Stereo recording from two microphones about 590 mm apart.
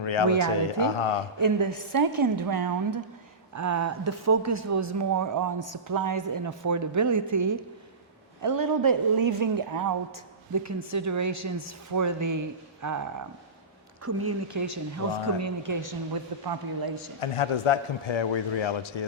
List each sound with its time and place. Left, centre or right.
0.0 s speech: left
1.4 s a woman's voice: right
14.0 s a woman's voice: right
17.2 s a man's voice: left